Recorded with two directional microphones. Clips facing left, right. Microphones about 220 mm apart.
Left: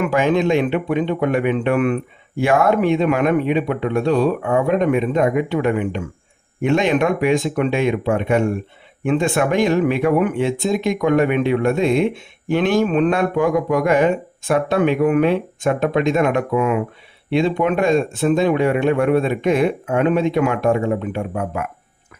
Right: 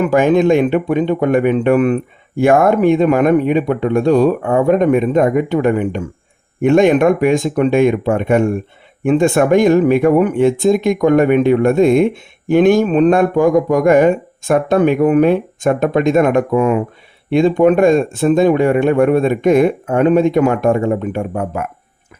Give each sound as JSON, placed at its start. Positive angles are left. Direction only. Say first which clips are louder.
{"t": 0.0, "sound": "speech", "louder": "right 5 dB", "side_deg": -45}